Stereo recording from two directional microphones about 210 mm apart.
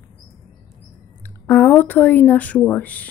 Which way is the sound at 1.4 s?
10° left (ahead or behind).